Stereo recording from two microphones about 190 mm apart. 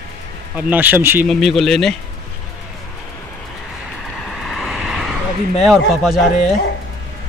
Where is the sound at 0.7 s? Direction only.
10° right (ahead or behind).